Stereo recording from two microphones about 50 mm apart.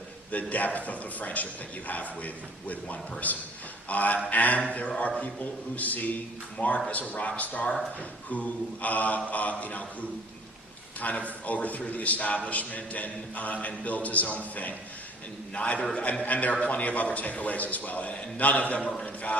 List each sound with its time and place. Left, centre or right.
0.3 s a capella: left
6.6 s a man's voice: left
8.3 s a capella: left
11.0 s a capella: left
15.5 s a man's voice: left